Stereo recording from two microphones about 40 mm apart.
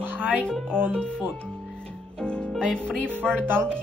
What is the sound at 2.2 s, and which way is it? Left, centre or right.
Music, left.